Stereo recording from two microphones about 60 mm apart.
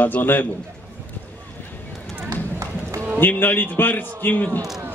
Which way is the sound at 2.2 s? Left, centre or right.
Right.